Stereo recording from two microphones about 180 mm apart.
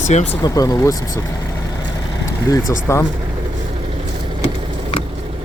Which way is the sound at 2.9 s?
15° left (ahead or behind).